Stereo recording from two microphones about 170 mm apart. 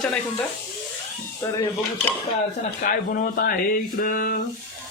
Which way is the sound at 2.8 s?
55° left (ahead or behind).